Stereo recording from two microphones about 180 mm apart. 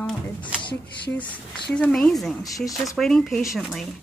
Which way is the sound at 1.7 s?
5° left (ahead or behind).